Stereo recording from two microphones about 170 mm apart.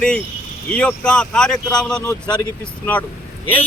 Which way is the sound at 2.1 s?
25° left (ahead or behind).